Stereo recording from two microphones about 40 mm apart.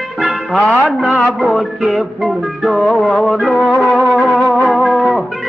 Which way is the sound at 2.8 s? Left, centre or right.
Centre.